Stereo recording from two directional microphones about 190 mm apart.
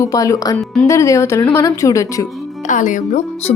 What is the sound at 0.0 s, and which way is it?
Speech, 15° left (ahead or behind).